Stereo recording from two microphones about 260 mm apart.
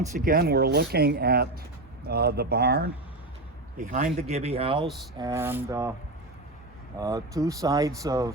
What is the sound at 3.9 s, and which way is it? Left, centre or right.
Speech, right.